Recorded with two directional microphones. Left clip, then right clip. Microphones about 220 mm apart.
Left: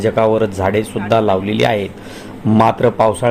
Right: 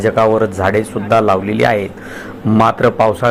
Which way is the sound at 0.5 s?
15° left (ahead or behind).